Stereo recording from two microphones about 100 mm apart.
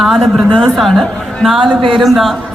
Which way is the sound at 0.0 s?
Centre (ahead or behind).